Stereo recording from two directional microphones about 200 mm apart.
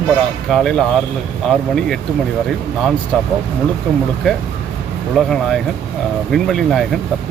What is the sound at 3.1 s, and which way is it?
Speech, 5° left (ahead or behind).